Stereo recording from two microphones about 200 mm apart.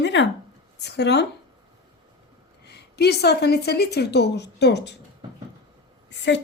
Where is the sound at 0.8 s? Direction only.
55° left (ahead or behind).